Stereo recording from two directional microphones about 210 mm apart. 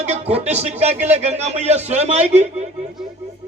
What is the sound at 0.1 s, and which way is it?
A man's voice, 30° right (ahead or behind).